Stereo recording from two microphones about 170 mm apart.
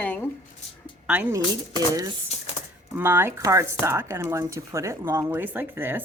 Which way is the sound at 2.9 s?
15° right (ahead or behind).